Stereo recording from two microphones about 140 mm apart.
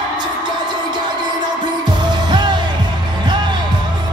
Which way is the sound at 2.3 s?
35° right (ahead or behind).